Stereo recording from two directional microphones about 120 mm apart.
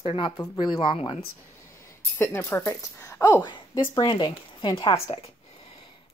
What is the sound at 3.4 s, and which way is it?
A woman's voice, 35° left (ahead or behind).